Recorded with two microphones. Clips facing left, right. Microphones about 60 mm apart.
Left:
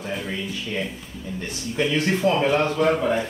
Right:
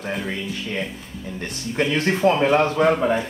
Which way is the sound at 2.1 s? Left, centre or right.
Right.